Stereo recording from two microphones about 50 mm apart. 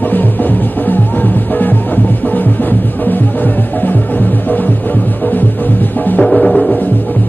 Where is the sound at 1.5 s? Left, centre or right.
Left.